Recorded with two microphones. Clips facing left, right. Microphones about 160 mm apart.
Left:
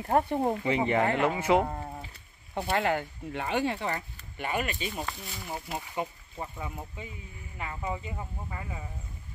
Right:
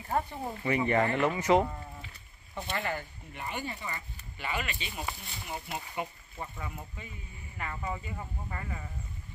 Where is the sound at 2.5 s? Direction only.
75° left (ahead or behind).